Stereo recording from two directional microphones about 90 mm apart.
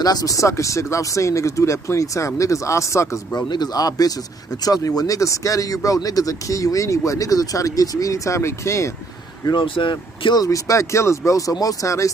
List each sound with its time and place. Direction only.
0.0 s speech: 45° left (ahead or behind)
3.3 s speech: 50° left (ahead or behind); by 8.9 s 30° left (ahead or behind)
9.5 s speech: 65° left (ahead or behind)
10.4 s speech: 35° left (ahead or behind)